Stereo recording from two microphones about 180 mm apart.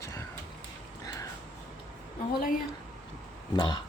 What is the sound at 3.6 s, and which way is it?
Speech, 25° left (ahead or behind).